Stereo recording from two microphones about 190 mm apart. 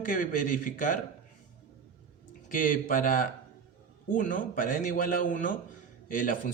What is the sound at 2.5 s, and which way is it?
Speech, 45° left (ahead or behind).